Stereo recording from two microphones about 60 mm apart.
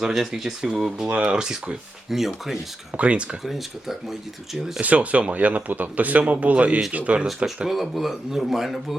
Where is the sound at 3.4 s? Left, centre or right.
Centre.